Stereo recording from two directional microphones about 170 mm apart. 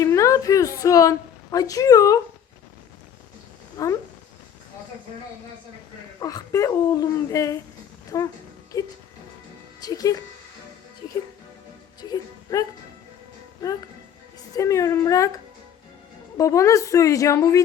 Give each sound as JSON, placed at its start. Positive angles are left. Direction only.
{"t": 0.0, "sound": "a woman's voice", "side_deg": 20}
{"t": 3.8, "sound": "speech", "side_deg": 20}
{"t": 6.1, "sound": "speech", "side_deg": 20}
{"t": 11.9, "sound": "music", "side_deg": 25}
{"t": 14.5, "sound": "speech", "side_deg": 20}
{"t": 16.4, "sound": "speech", "side_deg": 20}